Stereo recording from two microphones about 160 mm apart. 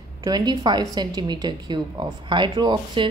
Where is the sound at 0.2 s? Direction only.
25° right (ahead or behind).